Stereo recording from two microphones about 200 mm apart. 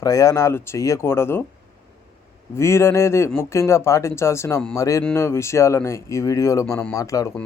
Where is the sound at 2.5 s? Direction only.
15° left (ahead or behind).